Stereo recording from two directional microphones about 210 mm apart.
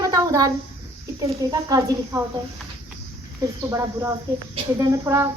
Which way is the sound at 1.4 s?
15° right (ahead or behind).